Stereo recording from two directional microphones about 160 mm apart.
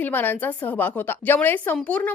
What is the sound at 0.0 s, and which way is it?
A woman's voice, 10° left (ahead or behind).